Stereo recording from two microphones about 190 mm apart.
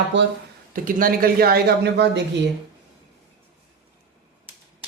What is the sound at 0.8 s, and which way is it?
Speech, 45° right (ahead or behind).